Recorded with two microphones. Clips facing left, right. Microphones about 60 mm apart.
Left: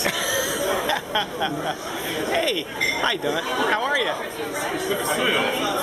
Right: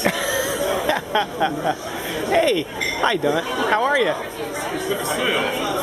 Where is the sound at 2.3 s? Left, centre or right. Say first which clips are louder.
Right 8 dB; centre.